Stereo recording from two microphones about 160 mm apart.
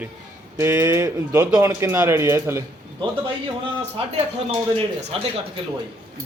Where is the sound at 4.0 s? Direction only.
35° right (ahead or behind).